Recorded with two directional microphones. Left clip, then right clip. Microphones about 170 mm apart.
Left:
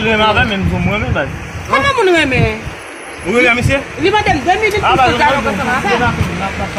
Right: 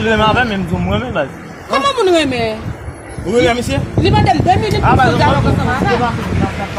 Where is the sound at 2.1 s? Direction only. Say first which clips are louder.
Left 1 dB; 45° right (ahead or behind).